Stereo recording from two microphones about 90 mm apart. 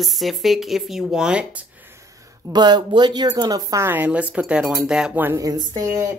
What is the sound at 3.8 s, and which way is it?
Speech, 20° right (ahead or behind).